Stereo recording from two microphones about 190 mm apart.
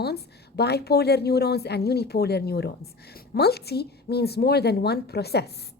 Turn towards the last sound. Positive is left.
turn(degrees=60)  # may be behind; listen again after turning